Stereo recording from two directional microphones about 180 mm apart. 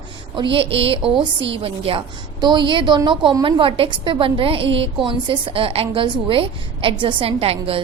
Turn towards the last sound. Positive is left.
turn(degrees=-30)  # may be behind; listen again after turning